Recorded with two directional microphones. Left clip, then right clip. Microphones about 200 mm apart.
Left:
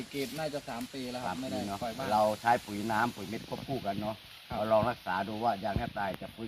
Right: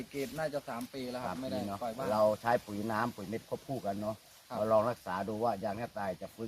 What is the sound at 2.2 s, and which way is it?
Speech, 45° right (ahead or behind).